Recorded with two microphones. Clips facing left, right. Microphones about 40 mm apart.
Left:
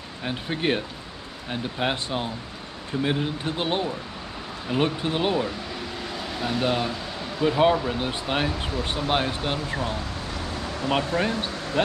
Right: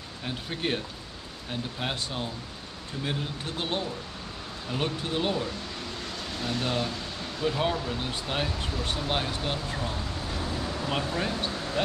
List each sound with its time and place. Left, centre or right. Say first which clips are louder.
0.2 s speech: left 5 dB; left
11.1 s speech: left 4 dB; left